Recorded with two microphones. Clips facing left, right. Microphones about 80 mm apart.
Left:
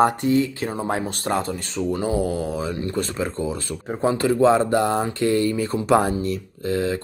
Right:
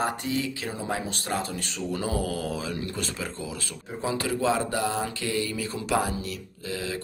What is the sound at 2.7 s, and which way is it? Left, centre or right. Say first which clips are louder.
Speech: left 6 dB; left.